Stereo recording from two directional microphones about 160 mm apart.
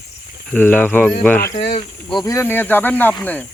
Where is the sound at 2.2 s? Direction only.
15° left (ahead or behind).